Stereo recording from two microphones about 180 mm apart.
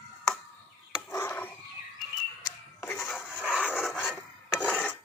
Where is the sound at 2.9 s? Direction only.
5° right (ahead or behind).